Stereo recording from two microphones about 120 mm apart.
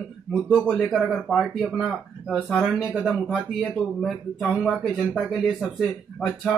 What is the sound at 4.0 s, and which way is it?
Speech, 5° left (ahead or behind).